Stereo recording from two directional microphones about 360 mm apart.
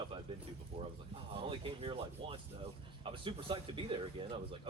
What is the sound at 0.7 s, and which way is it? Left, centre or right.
Speech, centre.